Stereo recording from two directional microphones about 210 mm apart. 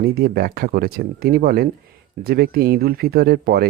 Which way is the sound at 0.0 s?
45° right (ahead or behind).